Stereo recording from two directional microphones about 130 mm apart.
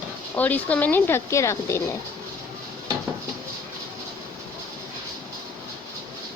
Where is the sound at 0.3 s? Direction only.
10° left (ahead or behind).